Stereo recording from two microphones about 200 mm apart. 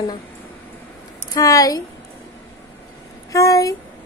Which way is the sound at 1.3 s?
15° left (ahead or behind).